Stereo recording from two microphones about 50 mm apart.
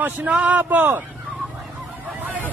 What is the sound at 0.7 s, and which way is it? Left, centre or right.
Speech, right.